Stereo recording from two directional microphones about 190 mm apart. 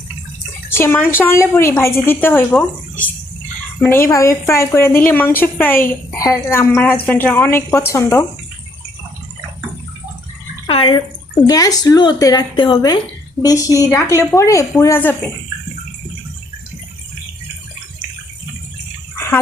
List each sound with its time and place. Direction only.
0.7 s a woman's voice: 10° left (ahead or behind)
3.8 s a woman's voice: 10° left (ahead or behind)
10.7 s a woman's voice: 30° left (ahead or behind)